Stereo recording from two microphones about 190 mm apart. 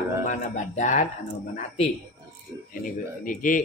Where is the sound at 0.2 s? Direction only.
40° left (ahead or behind).